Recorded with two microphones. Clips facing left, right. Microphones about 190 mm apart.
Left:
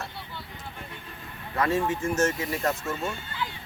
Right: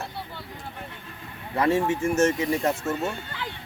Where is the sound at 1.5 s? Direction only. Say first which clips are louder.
Right 3 dB; 30° right (ahead or behind).